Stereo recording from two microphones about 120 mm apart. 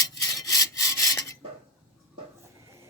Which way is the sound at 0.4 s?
30° left (ahead or behind).